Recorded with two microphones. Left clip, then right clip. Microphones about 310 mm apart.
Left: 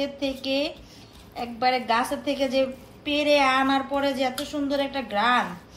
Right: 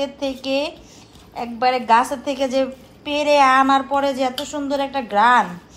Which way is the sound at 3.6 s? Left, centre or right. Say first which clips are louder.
Right 7 dB; right.